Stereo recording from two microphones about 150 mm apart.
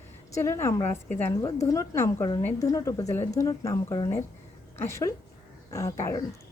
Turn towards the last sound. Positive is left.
turn(degrees=20)  # may be behind; listen again after turning